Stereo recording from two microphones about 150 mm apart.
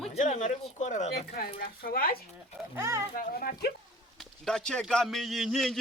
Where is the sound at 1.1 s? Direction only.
90° left.